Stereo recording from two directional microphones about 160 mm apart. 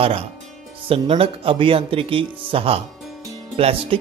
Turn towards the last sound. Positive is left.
turn(degrees=-35)  # may be behind; listen again after turning